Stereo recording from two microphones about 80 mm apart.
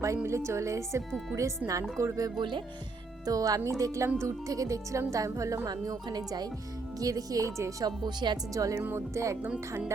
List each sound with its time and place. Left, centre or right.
0.3 s speech: right
2.4 s speech: right
3.2 s speech: right
5.6 s speech: right
7.9 s speech: right
8.5 s speech: right